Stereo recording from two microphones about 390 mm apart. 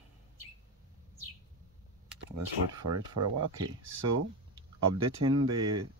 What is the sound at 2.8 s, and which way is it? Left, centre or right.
Speech, right.